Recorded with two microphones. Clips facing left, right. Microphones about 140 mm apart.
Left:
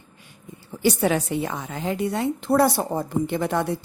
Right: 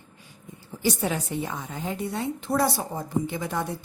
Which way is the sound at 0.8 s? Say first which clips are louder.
Left 6 dB; 75° left (ahead or behind).